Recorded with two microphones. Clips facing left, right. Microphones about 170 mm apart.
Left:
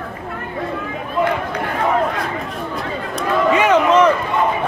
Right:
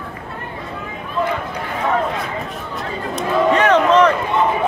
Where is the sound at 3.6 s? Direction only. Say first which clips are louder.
Even; 10° left (ahead or behind).